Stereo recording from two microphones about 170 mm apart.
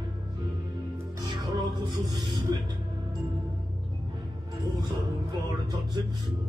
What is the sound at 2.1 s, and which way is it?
Speech, 25° right (ahead or behind).